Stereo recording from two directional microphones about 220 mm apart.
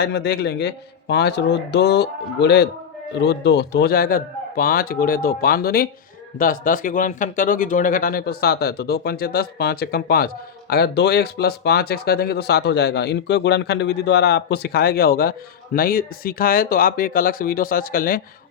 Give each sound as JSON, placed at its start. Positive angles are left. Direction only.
{"t": 0.0, "sound": "speech", "side_deg": 50}